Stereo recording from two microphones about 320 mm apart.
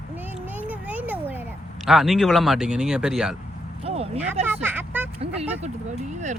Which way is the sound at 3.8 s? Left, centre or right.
Centre.